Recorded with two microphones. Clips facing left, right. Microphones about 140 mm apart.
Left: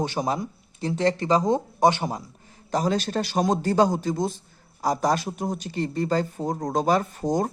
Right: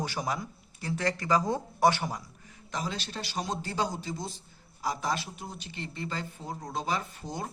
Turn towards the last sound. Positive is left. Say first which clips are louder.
# left 12 dB
turn(degrees=45)  # may be behind; listen again after turning